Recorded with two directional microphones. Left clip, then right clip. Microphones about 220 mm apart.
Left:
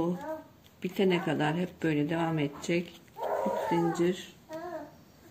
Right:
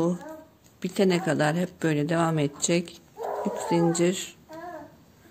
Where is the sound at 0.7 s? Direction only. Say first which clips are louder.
Right 4 dB; 50° right (ahead or behind).